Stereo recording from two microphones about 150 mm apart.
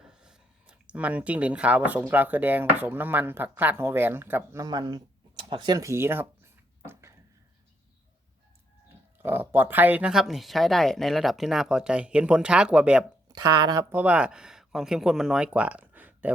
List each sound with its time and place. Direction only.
0.0 s speech: 5° right (ahead or behind)
4.6 s a sound: 30° right (ahead or behind)
9.1 s speech: 15° right (ahead or behind)
13.2 s speech: 25° right (ahead or behind)
13.9 s speech: 10° right (ahead or behind)